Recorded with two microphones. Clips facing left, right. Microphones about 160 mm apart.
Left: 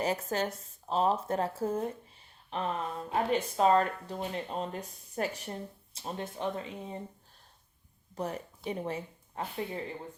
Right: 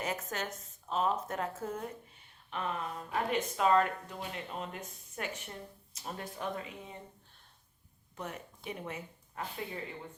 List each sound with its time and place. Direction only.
0.0 s speech: 35° left (ahead or behind)
8.1 s speech: 35° left (ahead or behind)